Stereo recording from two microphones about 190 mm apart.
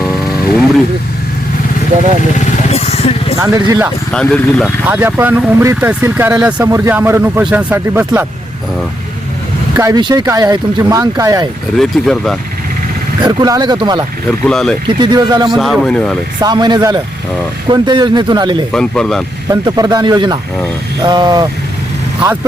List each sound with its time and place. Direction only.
2.4 s vehicle: 35° left (ahead or behind)
3.3 s speech: 15° right (ahead or behind)
4.1 s a man's voice: 5° left (ahead or behind)
4.9 s speech: 10° right (ahead or behind)
9.7 s speech: 20° right (ahead or behind)
11.8 s a man's voice: centre (ahead or behind)
13.2 s speech: 20° right (ahead or behind)
14.3 s a man's voice: 5° left (ahead or behind)
14.8 s speech: 20° right (ahead or behind)
15.4 s a man's voice: centre (ahead or behind)
16.4 s speech: 20° right (ahead or behind)
18.7 s a man's voice: 5° left (ahead or behind)
19.5 s speech: 20° right (ahead or behind)